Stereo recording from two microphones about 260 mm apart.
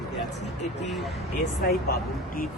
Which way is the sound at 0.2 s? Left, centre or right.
Left.